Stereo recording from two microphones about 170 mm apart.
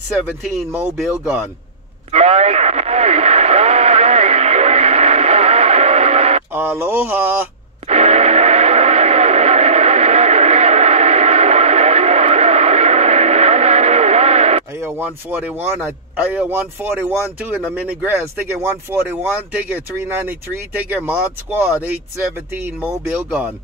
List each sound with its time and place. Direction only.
0.4 s speech: 5° right (ahead or behind)
2.1 s radio: 40° right (ahead or behind)
6.5 s speech: 10° right (ahead or behind)
7.9 s vehicle: 40° right (ahead or behind)
14.8 s speech: 15° right (ahead or behind)
22.5 s speech: 10° right (ahead or behind)